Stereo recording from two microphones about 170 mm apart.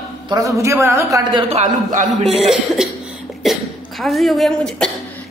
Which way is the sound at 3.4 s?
Centre (ahead or behind).